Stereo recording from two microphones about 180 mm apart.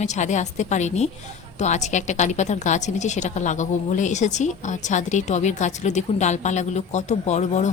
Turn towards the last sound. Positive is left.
turn(degrees=40)  # may be behind; listen again after turning